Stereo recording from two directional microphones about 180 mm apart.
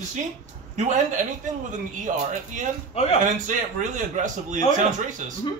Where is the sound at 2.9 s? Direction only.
35° left (ahead or behind).